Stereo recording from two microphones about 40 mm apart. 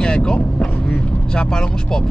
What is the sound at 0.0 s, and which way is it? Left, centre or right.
Vehicle, left.